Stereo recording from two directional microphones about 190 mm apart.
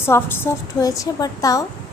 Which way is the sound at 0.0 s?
10° left (ahead or behind).